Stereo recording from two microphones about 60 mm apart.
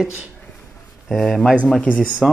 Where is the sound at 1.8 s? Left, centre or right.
Left.